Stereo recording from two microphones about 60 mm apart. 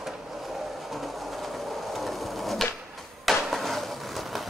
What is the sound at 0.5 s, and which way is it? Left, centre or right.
Train, centre.